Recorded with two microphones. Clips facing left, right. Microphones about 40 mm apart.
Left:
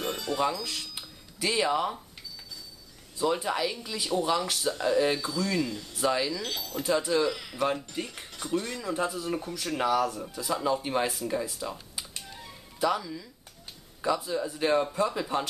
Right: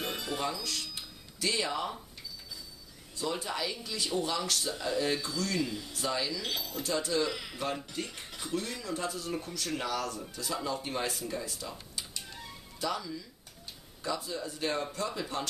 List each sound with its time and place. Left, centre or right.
0.0 s music: centre
0.4 s speech: centre
0.9 s music: centre
3.2 s speech: centre
5.6 s speech: centre
5.9 s speech: centre
6.4 s speech: centre
6.8 s speech: centre
7.2 s speech: centre
8.8 s speech: centre
12.2 s music: centre
12.8 s speech: centre